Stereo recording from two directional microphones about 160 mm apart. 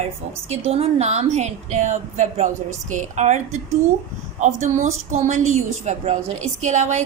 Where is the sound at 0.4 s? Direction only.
40° right (ahead or behind).